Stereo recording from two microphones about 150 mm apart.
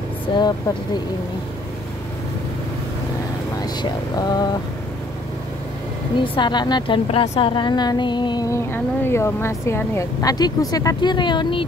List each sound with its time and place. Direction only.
0.3 s speech: 35° left (ahead or behind)
3.6 s speech: 25° left (ahead or behind)
6.1 s speech: 35° left (ahead or behind)
8.7 s speech: 15° left (ahead or behind); by 11.6 s 30° left (ahead or behind)